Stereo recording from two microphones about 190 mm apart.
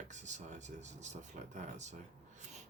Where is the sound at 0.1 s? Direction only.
40° right (ahead or behind).